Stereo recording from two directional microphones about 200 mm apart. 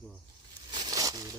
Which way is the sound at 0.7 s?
20° right (ahead or behind).